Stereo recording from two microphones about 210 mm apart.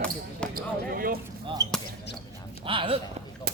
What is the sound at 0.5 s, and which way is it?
Speech, 45° right (ahead or behind).